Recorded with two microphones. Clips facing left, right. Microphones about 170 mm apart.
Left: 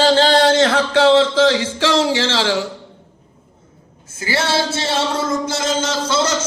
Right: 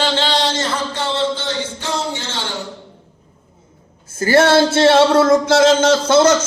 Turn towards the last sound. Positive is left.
turn(degrees=-55)  # may be behind; listen again after turning